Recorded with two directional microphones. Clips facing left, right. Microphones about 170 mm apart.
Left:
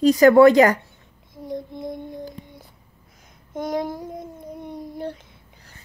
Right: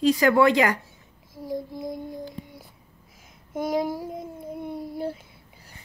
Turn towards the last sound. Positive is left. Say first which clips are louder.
# even
turn(degrees=-5)  # may be behind; listen again after turning